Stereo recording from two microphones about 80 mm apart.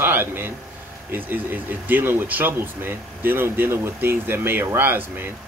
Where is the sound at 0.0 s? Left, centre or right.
Right.